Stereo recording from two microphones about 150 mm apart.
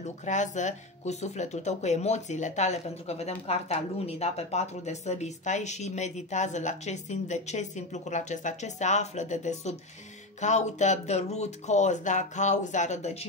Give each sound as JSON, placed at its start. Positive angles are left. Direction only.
{"t": 0.0, "sound": "speech", "side_deg": 50}